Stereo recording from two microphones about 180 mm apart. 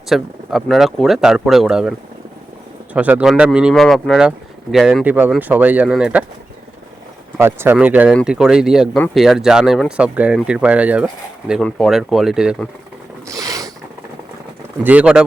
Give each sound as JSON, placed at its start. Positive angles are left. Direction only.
{"t": 0.1, "sound": "speech", "side_deg": 0}
{"t": 7.3, "sound": "speech", "side_deg": -15}
{"t": 13.2, "sound": "mechanisms", "side_deg": -20}
{"t": 14.8, "sound": "speech", "side_deg": -5}